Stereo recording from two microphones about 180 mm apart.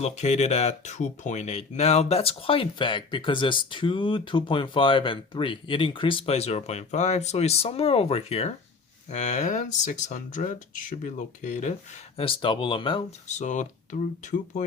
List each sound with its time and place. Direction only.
0.0 s speech: 40° left (ahead or behind)
12.1 s speech: 30° left (ahead or behind)